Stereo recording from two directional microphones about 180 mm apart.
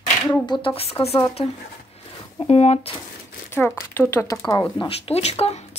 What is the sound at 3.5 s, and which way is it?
Speech, 10° left (ahead or behind).